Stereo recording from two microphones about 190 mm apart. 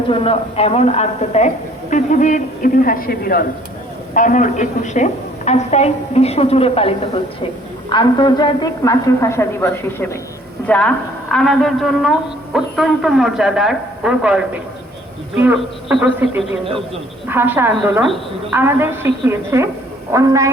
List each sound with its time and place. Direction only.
0.1 s a woman's voice: 30° left (ahead or behind); by 20.5 s 15° right (ahead or behind)